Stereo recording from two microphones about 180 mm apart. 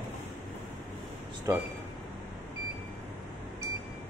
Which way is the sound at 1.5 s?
15° right (ahead or behind).